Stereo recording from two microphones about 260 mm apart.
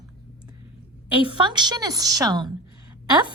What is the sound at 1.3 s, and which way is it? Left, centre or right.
A woman's voice, centre.